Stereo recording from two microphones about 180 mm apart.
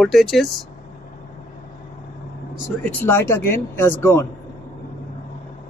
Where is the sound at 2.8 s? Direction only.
10° left (ahead or behind).